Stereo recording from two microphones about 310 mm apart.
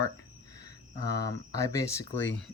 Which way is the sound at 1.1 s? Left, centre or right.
Centre.